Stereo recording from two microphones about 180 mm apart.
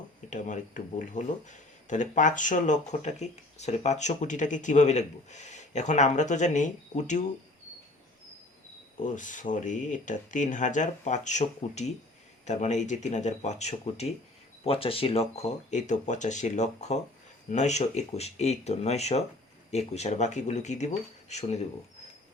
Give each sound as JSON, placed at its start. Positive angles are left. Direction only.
{"t": 0.3, "sound": "speech", "side_deg": 45}
{"t": 9.0, "sound": "speech", "side_deg": 45}